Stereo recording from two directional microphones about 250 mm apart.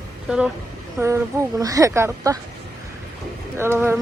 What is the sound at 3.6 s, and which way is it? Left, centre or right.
Speech, centre.